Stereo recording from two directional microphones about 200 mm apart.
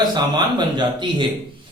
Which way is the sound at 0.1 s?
20° right (ahead or behind).